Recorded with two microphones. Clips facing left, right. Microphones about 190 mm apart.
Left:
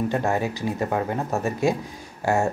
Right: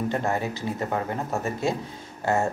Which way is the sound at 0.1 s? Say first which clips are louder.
Left 3 dB; 15° left (ahead or behind).